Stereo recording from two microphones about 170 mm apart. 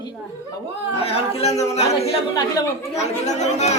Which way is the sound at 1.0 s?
35° left (ahead or behind).